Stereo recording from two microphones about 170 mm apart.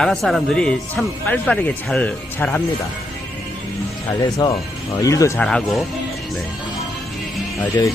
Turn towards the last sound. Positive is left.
turn(degrees=20)  # may be behind; listen again after turning